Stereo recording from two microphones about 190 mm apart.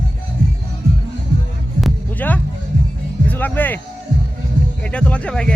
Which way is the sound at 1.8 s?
5° left (ahead or behind).